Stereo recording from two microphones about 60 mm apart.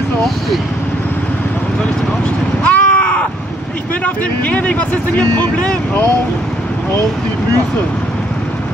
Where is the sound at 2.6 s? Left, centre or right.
Left.